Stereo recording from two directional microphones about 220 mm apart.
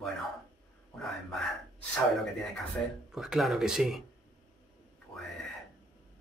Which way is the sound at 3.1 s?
Centre (ahead or behind).